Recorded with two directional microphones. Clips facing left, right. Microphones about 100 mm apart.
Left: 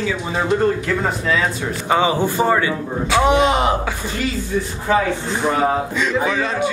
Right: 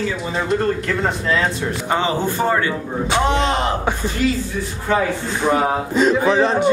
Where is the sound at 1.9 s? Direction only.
15° left (ahead or behind).